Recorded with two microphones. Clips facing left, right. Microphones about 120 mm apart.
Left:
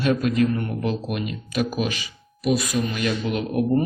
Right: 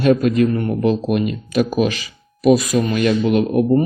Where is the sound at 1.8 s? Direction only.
90° right.